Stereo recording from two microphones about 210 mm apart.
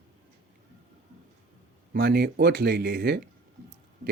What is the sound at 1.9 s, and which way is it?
A man's voice, 50° right (ahead or behind).